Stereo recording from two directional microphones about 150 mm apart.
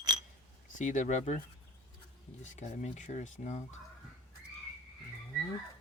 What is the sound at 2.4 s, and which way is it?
Speech, 50° left (ahead or behind).